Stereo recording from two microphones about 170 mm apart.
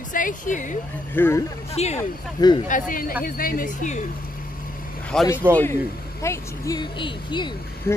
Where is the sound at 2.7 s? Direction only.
50° left (ahead or behind).